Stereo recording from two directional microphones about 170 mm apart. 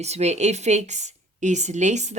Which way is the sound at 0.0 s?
40° right (ahead or behind).